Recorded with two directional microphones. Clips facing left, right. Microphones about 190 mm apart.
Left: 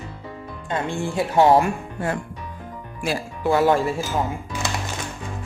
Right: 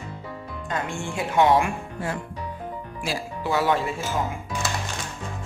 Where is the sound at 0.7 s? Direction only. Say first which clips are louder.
Left 4 dB; 30° left (ahead or behind).